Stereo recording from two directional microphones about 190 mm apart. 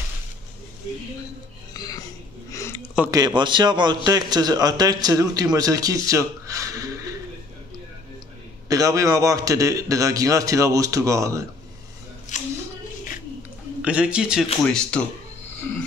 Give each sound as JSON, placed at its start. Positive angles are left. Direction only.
{"t": 1.7, "sound": "music", "side_deg": 20}
{"t": 2.5, "sound": "a sound", "side_deg": 15}
{"t": 3.1, "sound": "a man's voice", "side_deg": -20}
{"t": 8.6, "sound": "a man's voice", "side_deg": -15}
{"t": 12.3, "sound": "a sound", "side_deg": 40}
{"t": 13.8, "sound": "speech", "side_deg": -5}